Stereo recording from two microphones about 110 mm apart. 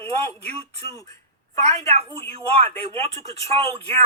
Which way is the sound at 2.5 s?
65° right (ahead or behind).